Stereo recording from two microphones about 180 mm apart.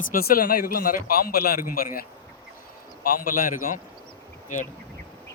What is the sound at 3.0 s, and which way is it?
A man's voice, 50° left (ahead or behind).